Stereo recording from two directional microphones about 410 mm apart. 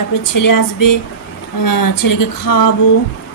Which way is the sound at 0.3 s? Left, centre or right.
Left.